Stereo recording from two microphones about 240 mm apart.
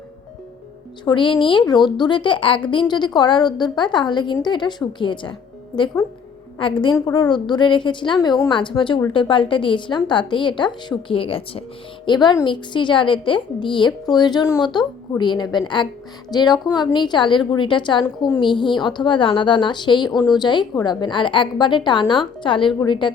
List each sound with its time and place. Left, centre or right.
1.0 s a woman's voice: centre